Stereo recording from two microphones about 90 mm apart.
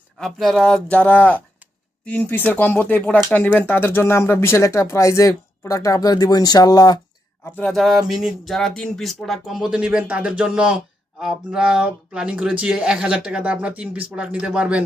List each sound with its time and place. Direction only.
0.2 s speech: 5° left (ahead or behind)
0.9 s speech: 15° left (ahead or behind); by 7.0 s 50° left (ahead or behind)
7.7 s speech: centre (ahead or behind)